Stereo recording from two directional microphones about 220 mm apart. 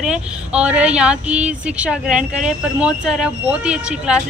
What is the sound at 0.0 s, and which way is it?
A man's voice, 5° right (ahead or behind).